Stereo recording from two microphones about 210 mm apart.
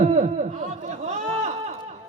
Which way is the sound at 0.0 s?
35° right (ahead or behind).